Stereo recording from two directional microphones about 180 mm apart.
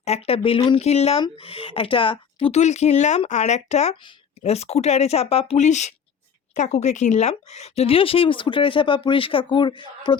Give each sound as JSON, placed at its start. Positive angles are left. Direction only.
{"t": 0.0, "sound": "speech", "side_deg": 35}